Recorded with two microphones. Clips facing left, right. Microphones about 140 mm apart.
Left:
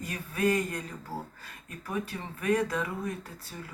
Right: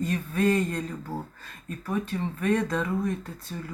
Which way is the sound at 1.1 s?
20° right (ahead or behind).